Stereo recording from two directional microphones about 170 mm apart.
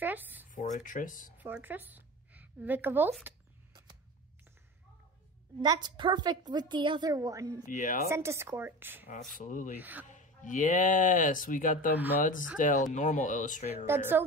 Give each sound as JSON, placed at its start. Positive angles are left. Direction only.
{"t": 0.0, "sound": "a sound", "side_deg": -10}
{"t": 0.6, "sound": "speech", "side_deg": 50}
{"t": 1.4, "sound": "a woman's voice", "side_deg": -10}
{"t": 5.6, "sound": "a woman's voice", "side_deg": -25}
{"t": 7.6, "sound": "speech", "side_deg": 50}
{"t": 8.1, "sound": "speech", "side_deg": -15}
{"t": 9.4, "sound": "speech", "side_deg": 50}
{"t": 9.8, "sound": "speech", "side_deg": -10}
{"t": 10.0, "sound": "speech", "side_deg": 45}
{"t": 13.8, "sound": "speech", "side_deg": -15}